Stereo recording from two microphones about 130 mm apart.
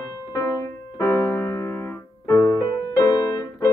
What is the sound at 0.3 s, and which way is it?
Keyboard, 25° left (ahead or behind).